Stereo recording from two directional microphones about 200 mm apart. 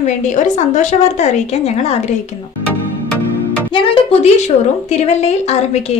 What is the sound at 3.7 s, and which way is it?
A woman's voice, 25° left (ahead or behind).